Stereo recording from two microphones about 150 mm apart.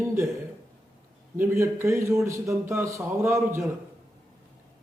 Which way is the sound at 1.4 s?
20° right (ahead or behind).